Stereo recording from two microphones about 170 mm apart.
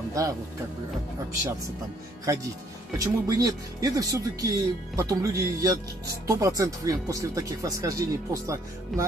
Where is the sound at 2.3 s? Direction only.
20° right (ahead or behind).